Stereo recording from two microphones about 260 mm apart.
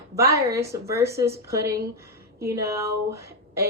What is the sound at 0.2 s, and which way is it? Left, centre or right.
A woman's voice, centre.